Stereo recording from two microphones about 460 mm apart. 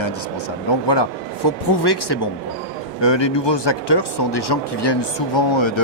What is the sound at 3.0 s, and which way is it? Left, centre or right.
Speech, left.